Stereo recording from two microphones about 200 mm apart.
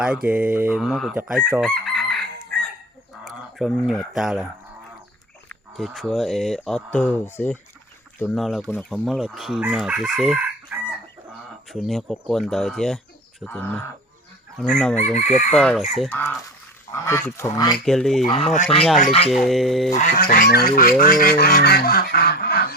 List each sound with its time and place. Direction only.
0.0 s chicken: 5° right (ahead or behind)
3.2 s speech: centre (ahead or behind)
5.5 s chicken: centre (ahead or behind)
13.4 s speech: 10° left (ahead or behind)
14.6 s chicken: 5° left (ahead or behind)
14.9 s chicken: 35° left (ahead or behind)
15.5 s chicken: centre (ahead or behind)
16.9 s speech: 15° left (ahead or behind)
17.8 s chicken: centre (ahead or behind)
18.3 s speech: 25° left (ahead or behind)
18.9 s chicken: 35° left (ahead or behind)
19.3 s chicken: centre (ahead or behind)
19.9 s fowl: 40° left (ahead or behind)